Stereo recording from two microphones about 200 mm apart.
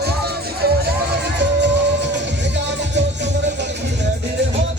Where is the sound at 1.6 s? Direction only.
60° right (ahead or behind).